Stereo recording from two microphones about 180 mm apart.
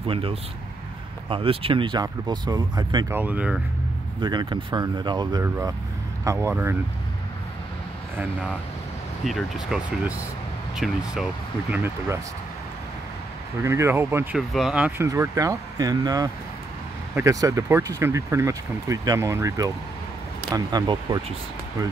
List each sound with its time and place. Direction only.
0.0 s speech: 30° right (ahead or behind)
3.1 s speech: 10° right (ahead or behind)
4.2 s speech: 25° right (ahead or behind)
9.2 s speech: centre (ahead or behind)
11.7 s speech: 15° right (ahead or behind)
13.6 s speech: 15° right (ahead or behind)
14.3 s speech: centre (ahead or behind); by 21.2 s 25° right (ahead or behind)